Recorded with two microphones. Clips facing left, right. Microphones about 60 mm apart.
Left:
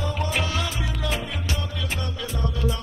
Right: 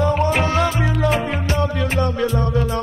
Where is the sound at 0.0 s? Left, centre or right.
Right.